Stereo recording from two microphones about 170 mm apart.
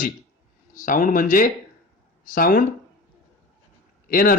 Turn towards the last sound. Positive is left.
turn(degrees=55)  # may be behind; listen again after turning